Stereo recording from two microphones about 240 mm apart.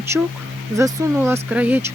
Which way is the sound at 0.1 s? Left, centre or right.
Centre.